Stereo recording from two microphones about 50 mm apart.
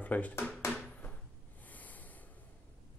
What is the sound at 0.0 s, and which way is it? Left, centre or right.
Speech, left.